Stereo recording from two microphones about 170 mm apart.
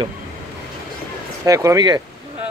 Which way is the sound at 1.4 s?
20° right (ahead or behind).